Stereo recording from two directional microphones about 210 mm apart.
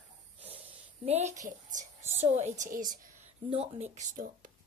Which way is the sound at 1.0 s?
30° right (ahead or behind).